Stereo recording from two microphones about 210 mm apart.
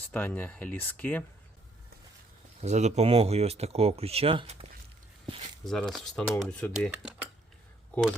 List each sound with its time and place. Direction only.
0.1 s speech: 10° left (ahead or behind)
2.6 s speech: 35° right (ahead or behind)
5.6 s speech: centre (ahead or behind)